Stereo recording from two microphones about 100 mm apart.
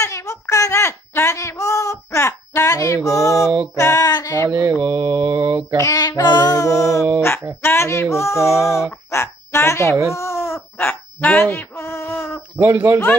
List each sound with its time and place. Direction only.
0.0 s a woman's voice: 30° left (ahead or behind)
3.7 s a sound: 30° left (ahead or behind)
4.5 s mantra: 25° right (ahead or behind)
5.8 s music: 30° left (ahead or behind)
6.2 s music: 45° left (ahead or behind); by 7.4 s 25° left (ahead or behind)
7.6 s speech: 25° left (ahead or behind)
8.9 s a sound: 25° left (ahead or behind)
12.5 s mantra: 20° right (ahead or behind)